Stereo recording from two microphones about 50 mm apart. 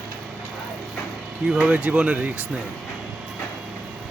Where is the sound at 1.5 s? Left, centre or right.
Right.